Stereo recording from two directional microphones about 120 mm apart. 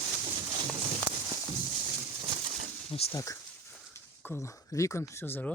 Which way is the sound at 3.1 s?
25° left (ahead or behind).